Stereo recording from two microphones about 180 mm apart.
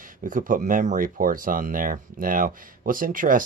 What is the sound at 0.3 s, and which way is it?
Speech, 45° right (ahead or behind).